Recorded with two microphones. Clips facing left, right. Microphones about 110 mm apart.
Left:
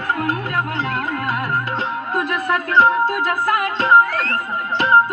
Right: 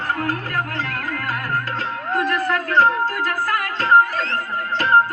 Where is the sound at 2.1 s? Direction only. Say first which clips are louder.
Right 1 dB; 15° left (ahead or behind).